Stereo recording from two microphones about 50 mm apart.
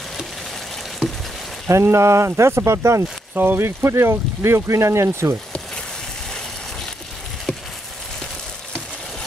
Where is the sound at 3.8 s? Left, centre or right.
Right.